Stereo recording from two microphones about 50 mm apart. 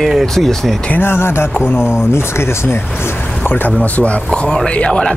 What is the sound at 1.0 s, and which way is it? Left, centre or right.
Speech, left.